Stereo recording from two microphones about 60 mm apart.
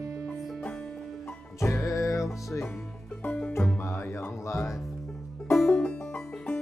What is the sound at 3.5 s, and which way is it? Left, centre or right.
Music, left.